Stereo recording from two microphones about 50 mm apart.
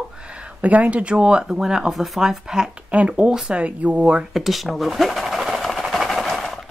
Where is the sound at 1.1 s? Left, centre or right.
Centre.